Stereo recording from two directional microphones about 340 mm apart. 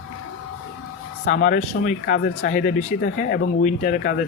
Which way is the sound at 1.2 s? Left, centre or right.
Left.